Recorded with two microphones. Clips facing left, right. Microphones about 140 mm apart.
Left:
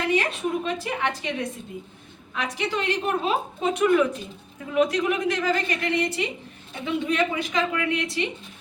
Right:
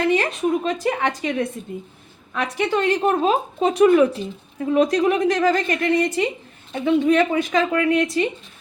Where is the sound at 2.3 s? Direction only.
50° right (ahead or behind).